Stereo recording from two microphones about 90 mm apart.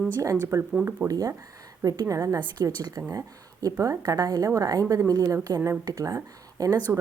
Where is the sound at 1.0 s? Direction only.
40° right (ahead or behind).